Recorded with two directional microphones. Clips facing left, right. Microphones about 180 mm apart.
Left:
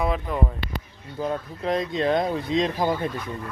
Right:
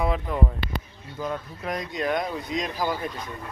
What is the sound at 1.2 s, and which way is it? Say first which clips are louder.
Speech: left 4 dB; 30° left (ahead or behind).